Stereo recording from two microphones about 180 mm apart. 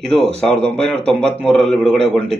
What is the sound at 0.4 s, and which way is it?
Speech, 5° left (ahead or behind).